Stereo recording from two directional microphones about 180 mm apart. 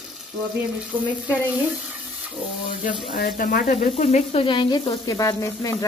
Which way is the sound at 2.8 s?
50° left (ahead or behind).